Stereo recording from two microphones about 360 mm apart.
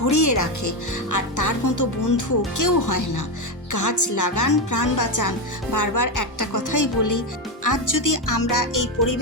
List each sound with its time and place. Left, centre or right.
0.0 s a woman's voice: left